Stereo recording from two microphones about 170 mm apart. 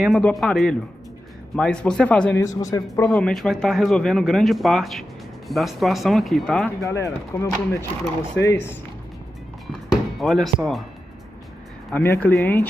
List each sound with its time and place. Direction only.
0.0 s speech: centre (ahead or behind)
2.4 s speech: 20° left (ahead or behind)
3.1 s speech: 5° left (ahead or behind)
6.8 s speech: 15° left (ahead or behind)
8.5 s speech: 15° left (ahead or behind)
9.7 s music: centre (ahead or behind)
11.9 s speech: 10° left (ahead or behind)